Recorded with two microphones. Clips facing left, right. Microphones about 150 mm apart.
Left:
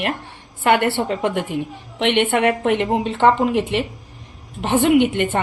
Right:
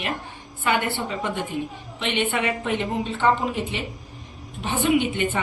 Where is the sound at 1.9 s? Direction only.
70° left (ahead or behind).